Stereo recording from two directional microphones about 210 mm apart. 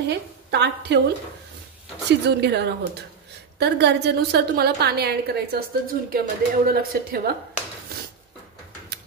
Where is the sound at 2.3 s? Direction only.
50° right (ahead or behind).